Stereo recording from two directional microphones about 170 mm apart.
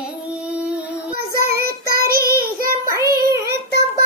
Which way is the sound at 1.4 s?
65° right (ahead or behind).